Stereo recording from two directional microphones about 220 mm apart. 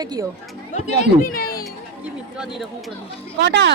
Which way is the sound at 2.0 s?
5° right (ahead or behind).